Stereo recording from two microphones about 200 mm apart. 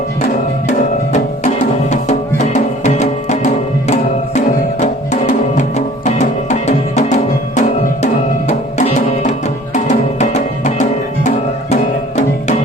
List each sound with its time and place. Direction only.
1.9 s music: 35° left (ahead or behind)